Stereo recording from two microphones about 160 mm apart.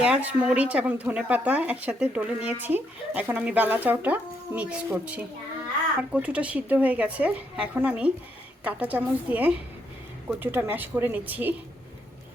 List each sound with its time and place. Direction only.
0.0 s speech: 10° right (ahead or behind)